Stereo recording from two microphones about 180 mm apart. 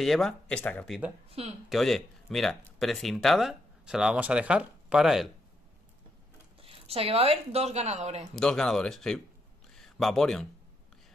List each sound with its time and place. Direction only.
0.0 s speech: centre (ahead or behind)
6.6 s speech: 30° right (ahead or behind)
8.4 s speech: 5° left (ahead or behind)